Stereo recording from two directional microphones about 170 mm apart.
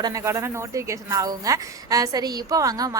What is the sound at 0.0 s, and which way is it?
A woman's voice, 20° right (ahead or behind).